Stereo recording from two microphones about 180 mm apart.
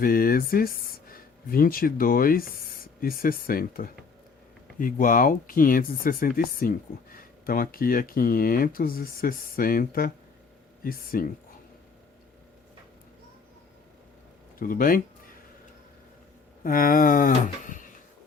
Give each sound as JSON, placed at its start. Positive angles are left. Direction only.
{"t": 0.0, "sound": "speech", "side_deg": 55}
{"t": 14.6, "sound": "speech", "side_deg": 50}
{"t": 16.6, "sound": "speech", "side_deg": 50}